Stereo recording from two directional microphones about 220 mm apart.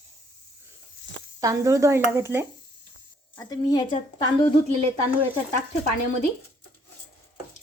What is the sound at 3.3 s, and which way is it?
Speech, 20° left (ahead or behind).